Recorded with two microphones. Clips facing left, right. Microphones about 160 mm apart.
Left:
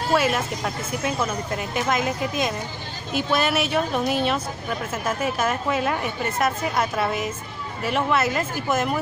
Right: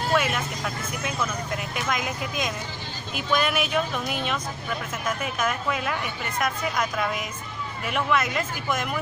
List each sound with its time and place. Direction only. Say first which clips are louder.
0.1 s speech: left 4 dB; 35° left (ahead or behind)
1.9 s speech: left 5 dB; 35° left (ahead or behind)